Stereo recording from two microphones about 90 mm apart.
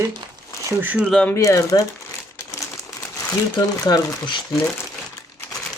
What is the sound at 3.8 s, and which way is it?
Speech, 50° left (ahead or behind).